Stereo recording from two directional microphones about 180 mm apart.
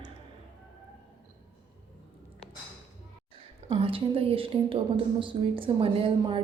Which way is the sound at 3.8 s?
30° right (ahead or behind).